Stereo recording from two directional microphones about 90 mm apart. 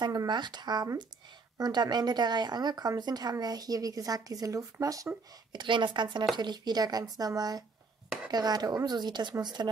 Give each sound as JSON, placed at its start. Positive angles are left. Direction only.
{"t": 0.0, "sound": "speech", "side_deg": -50}
{"t": 5.6, "sound": "speech", "side_deg": -65}